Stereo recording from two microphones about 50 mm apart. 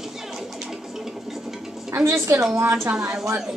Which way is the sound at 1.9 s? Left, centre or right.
Right.